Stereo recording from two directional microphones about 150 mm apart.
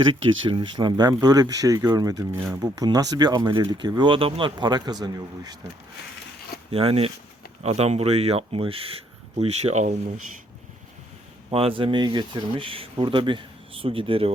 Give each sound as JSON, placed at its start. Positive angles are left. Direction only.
{"t": 0.1, "sound": "speech", "side_deg": -30}
{"t": 6.7, "sound": "speech", "side_deg": -40}
{"t": 11.5, "sound": "speech", "side_deg": -40}